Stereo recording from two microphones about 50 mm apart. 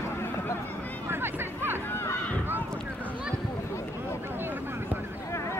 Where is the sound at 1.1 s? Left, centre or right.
Right.